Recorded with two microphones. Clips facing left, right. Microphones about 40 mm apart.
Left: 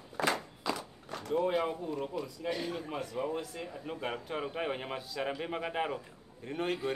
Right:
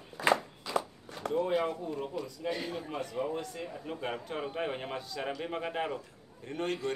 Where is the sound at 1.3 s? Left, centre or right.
Centre.